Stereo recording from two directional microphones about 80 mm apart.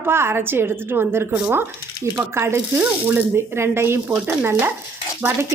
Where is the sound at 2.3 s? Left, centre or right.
Right.